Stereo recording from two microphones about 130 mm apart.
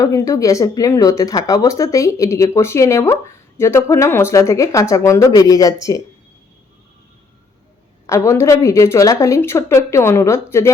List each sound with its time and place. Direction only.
0.0 s speech: 25° left (ahead or behind)
8.0 s speech: 25° left (ahead or behind)